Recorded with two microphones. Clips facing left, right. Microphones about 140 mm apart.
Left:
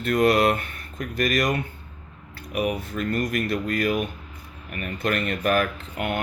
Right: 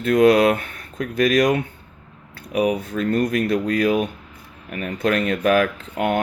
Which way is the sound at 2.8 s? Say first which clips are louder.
Right 5 dB; 60° right (ahead or behind).